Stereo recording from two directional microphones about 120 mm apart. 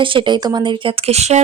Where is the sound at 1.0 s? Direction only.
65° right (ahead or behind).